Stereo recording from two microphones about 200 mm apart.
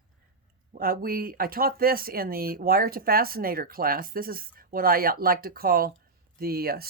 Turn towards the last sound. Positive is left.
turn(degrees=-50)  # may be behind; listen again after turning